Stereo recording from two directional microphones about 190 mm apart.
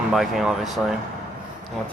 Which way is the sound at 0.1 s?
Centre (ahead or behind).